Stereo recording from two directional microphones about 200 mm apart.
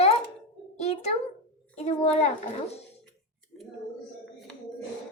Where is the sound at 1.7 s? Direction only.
30° left (ahead or behind).